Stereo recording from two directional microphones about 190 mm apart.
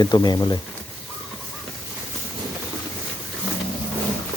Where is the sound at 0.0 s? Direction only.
20° left (ahead or behind).